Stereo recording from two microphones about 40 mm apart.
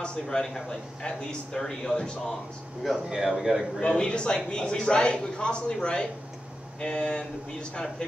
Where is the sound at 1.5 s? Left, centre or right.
Centre.